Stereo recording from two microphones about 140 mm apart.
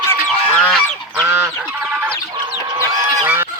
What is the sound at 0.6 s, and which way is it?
Goose, 5° left (ahead or behind).